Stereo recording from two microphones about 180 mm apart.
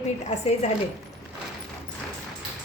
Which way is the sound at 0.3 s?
35° left (ahead or behind).